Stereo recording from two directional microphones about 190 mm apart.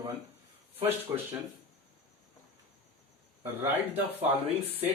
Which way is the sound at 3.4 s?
10° right (ahead or behind).